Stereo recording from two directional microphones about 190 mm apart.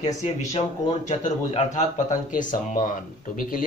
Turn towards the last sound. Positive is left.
turn(degrees=45)  # may be behind; listen again after turning